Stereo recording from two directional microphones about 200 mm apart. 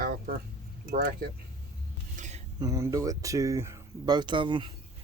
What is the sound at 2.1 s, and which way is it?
Dishes, 35° right (ahead or behind).